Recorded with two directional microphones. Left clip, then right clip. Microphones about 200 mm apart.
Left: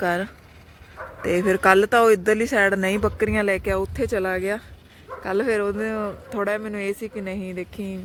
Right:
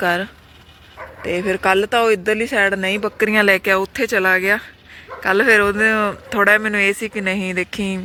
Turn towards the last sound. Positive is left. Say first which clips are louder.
# right 10 dB
turn(degrees=-10)  # may be behind; listen again after turning